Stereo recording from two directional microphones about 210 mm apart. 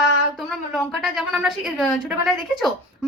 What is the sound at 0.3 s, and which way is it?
A woman's voice, centre (ahead or behind).